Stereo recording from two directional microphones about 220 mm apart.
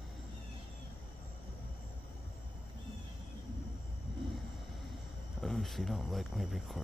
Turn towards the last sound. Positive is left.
turn(degrees=0)  # may be behind; listen again after turning